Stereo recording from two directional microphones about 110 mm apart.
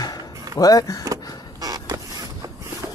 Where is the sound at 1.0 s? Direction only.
35° right (ahead or behind).